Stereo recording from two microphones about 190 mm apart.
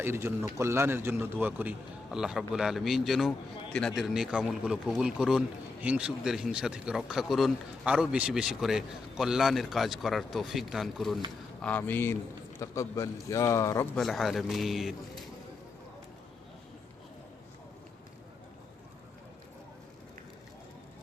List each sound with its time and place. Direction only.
0.0 s a man's voice: 10° right (ahead or behind); by 13.8 s 15° left (ahead or behind)
13.9 s a man's voice: centre (ahead or behind)